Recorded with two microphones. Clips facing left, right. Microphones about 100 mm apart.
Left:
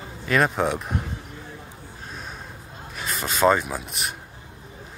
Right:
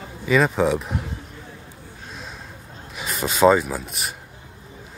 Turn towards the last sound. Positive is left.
turn(degrees=0)  # may be behind; listen again after turning